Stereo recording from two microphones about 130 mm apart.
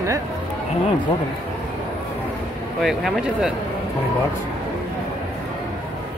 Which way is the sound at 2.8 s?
Centre (ahead or behind).